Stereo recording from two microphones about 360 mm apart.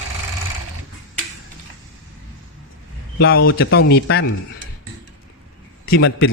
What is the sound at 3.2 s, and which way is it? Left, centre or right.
A man's voice, left.